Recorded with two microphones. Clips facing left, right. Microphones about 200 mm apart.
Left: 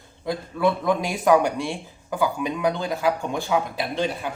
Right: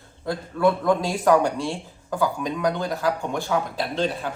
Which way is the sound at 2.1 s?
10° left (ahead or behind).